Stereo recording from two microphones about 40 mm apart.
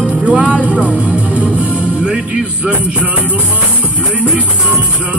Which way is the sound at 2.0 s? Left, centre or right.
Right.